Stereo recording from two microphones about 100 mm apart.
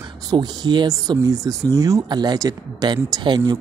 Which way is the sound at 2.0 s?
45° right (ahead or behind).